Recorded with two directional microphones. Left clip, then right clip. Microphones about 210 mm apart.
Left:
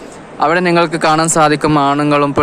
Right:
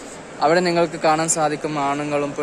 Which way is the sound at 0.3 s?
20° left (ahead or behind).